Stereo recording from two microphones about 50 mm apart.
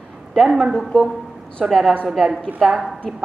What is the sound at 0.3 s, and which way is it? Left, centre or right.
A woman's voice, centre.